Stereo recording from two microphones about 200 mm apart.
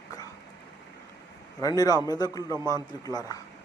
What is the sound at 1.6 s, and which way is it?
Speech, 20° left (ahead or behind).